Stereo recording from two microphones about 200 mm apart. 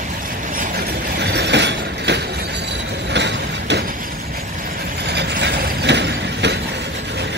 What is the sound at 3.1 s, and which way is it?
Vehicle, 60° right (ahead or behind).